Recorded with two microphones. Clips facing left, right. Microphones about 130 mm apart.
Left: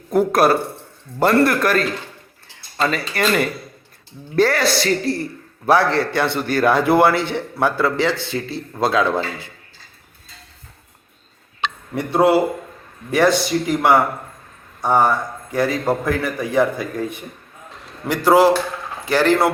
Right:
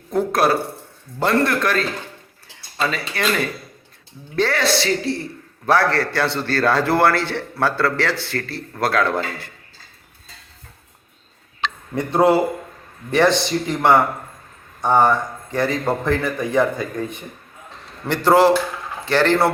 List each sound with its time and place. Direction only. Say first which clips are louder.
0.1 s a woman's voice: left 3 dB; 5° left (ahead or behind)
2.9 s a woman's voice: left 4 dB; 5° left (ahead or behind)
5.9 s a man's voice: left 2 dB; 20° left (ahead or behind)
12.2 s a woman's voice: left 1 dB; 5° left (ahead or behind)